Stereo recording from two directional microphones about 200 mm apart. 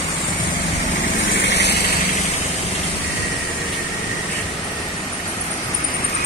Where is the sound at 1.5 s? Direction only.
60° left (ahead or behind).